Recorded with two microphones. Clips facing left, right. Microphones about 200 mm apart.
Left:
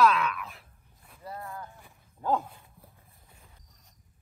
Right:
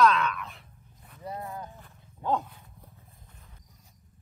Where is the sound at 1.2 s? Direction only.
20° right (ahead or behind).